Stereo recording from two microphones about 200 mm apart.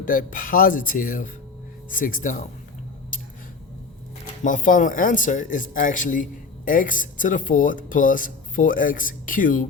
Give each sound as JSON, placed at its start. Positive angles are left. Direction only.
{"t": 0.0, "sound": "speech", "side_deg": 45}
{"t": 4.4, "sound": "speech", "side_deg": 40}